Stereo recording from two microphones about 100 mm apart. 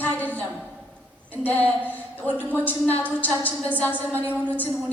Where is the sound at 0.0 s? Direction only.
15° left (ahead or behind).